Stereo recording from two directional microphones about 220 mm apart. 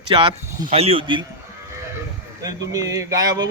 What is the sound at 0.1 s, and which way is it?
Speech, 25° right (ahead or behind).